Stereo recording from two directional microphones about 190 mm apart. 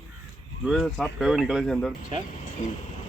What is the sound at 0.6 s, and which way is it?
Speech, 5° right (ahead or behind).